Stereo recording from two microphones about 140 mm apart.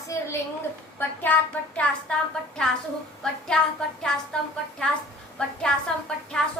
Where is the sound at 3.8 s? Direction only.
5° left (ahead or behind).